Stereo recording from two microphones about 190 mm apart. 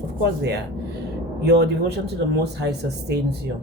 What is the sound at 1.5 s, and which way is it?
Speech, 60° right (ahead or behind).